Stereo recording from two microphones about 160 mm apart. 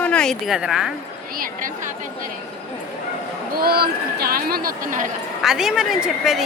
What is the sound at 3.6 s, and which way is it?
Speech, 75° right (ahead or behind).